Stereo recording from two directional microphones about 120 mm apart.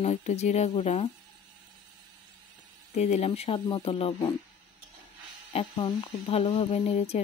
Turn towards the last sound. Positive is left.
turn(degrees=60)  # may be behind; listen again after turning